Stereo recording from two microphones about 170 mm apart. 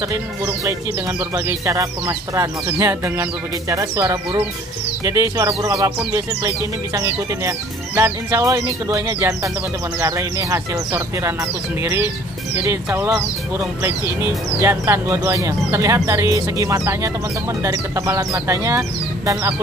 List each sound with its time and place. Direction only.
1.3 s speech: 20° right (ahead or behind)